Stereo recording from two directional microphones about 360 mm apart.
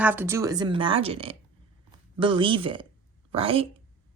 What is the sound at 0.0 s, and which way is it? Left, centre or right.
Speech, centre.